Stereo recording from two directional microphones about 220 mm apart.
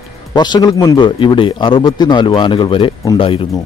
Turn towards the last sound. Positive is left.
turn(degrees=25)  # may be behind; listen again after turning